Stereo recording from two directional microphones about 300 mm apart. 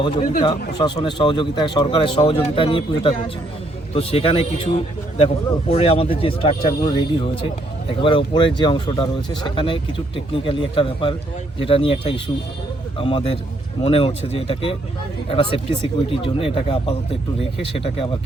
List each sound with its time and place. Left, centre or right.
0.0 s a man's voice: centre